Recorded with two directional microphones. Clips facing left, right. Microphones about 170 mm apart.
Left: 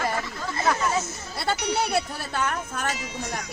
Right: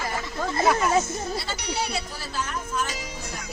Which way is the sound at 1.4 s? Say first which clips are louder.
Left 4 dB; 60° left (ahead or behind).